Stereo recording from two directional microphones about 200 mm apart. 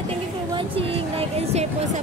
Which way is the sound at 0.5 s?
25° right (ahead or behind).